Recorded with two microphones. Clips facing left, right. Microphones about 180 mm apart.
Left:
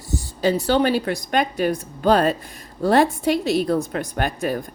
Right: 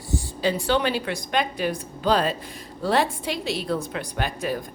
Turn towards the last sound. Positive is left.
turn(degrees=50)  # may be behind; listen again after turning